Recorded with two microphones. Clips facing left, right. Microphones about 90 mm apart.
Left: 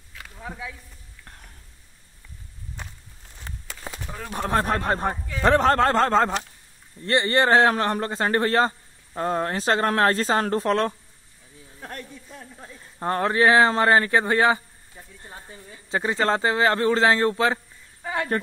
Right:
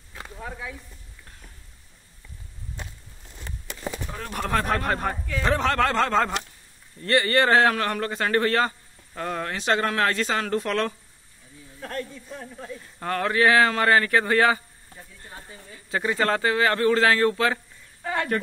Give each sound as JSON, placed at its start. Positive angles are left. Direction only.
{"t": 4.3, "sound": "speech", "side_deg": 25}
{"t": 5.4, "sound": "a man's voice", "side_deg": 45}
{"t": 11.8, "sound": "a sound", "side_deg": 15}
{"t": 13.0, "sound": "speech", "side_deg": 30}